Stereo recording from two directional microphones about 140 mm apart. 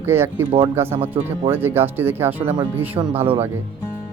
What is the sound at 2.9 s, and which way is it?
Speech, 45° right (ahead or behind).